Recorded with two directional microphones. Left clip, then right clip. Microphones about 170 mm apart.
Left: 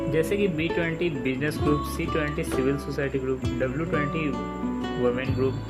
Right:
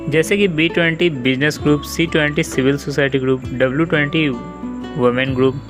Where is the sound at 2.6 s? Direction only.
40° right (ahead or behind).